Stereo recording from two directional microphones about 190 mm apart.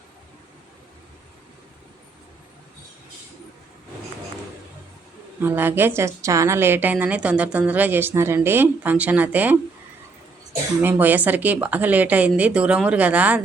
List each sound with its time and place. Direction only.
5.4 s a woman's voice: 10° right (ahead or behind)
10.8 s a woman's voice: 10° right (ahead or behind)